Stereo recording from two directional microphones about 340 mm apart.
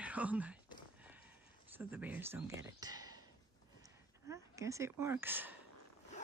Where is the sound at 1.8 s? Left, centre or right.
Centre.